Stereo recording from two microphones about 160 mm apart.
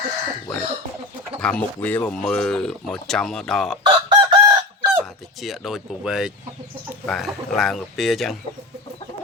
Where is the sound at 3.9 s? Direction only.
30° right (ahead or behind).